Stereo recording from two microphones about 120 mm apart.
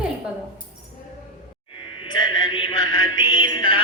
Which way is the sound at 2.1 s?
35° left (ahead or behind).